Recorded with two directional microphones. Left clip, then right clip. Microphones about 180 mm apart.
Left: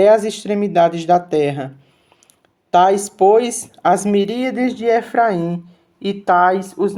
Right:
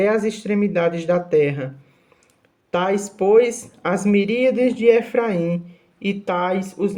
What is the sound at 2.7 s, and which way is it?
Speech, 30° left (ahead or behind).